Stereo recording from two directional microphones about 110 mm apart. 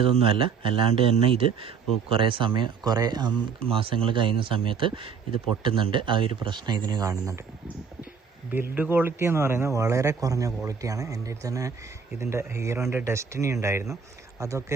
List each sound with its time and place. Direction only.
0.0 s speech: 60° right (ahead or behind); by 3.3 s 40° right (ahead or behind)
3.7 s speech: 55° right (ahead or behind); by 7.4 s 30° right (ahead or behind)
8.5 s speech: 20° right (ahead or behind)